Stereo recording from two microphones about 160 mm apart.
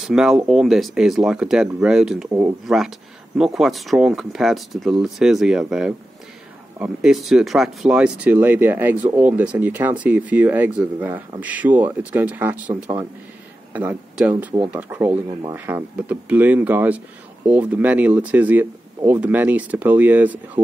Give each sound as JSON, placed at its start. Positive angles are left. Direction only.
{"t": 0.0, "sound": "speech", "side_deg": -5}
{"t": 20.6, "sound": "speech", "side_deg": -30}